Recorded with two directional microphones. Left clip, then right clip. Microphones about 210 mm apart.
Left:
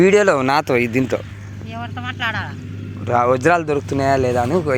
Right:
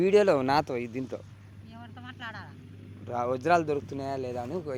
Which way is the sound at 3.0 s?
Centre (ahead or behind).